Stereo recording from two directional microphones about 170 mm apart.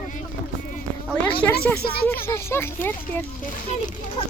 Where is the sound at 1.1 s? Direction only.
10° left (ahead or behind).